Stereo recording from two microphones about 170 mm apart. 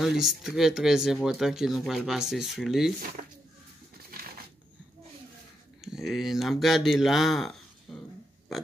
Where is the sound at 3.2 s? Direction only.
50° right (ahead or behind).